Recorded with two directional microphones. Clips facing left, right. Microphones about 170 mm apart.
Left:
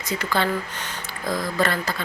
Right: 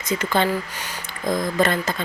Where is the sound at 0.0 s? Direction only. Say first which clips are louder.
Right 3 dB; 20° right (ahead or behind).